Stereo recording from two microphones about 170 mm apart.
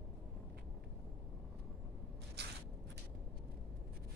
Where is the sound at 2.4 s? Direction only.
80° right.